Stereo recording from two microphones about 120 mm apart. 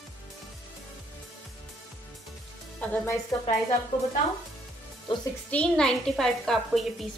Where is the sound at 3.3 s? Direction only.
40° left (ahead or behind).